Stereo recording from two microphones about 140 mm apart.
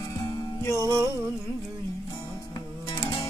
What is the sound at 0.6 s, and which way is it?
Music, 20° left (ahead or behind).